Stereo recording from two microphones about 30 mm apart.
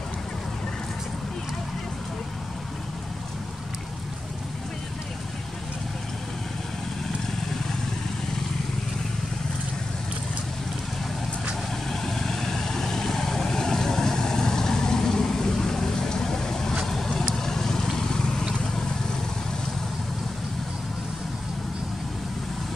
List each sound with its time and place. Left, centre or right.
11.9 s vehicle: centre